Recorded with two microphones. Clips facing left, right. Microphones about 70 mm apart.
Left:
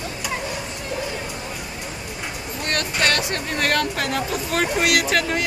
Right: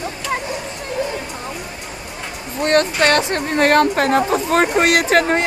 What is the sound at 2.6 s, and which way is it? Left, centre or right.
Speech, right.